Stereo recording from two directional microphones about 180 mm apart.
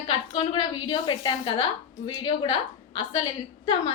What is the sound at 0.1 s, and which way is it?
A woman's voice, 30° left (ahead or behind).